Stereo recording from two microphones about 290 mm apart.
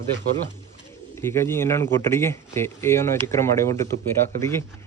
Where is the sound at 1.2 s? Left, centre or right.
Centre.